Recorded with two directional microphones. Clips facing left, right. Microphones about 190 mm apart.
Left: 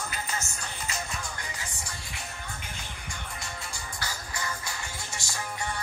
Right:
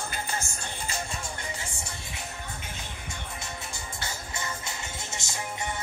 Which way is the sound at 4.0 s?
25° right (ahead or behind).